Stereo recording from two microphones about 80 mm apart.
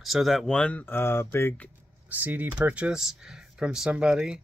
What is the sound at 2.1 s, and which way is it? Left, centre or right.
Speech, right.